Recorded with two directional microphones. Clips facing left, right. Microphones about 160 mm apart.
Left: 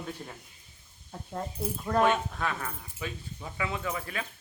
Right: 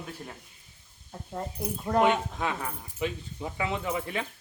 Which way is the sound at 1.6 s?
15° right (ahead or behind).